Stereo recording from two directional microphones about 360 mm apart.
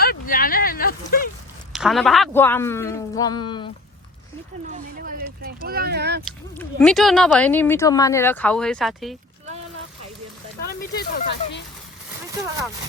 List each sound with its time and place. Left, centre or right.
0.0 s a sound: left
1.7 s speech: centre
4.6 s speech: right
6.2 s speech: centre
10.7 s speech: left